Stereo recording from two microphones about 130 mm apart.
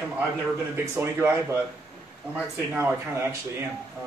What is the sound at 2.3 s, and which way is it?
Speech, 15° right (ahead or behind).